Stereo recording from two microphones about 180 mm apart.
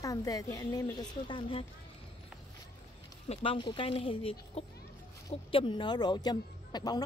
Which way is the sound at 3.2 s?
30° left (ahead or behind).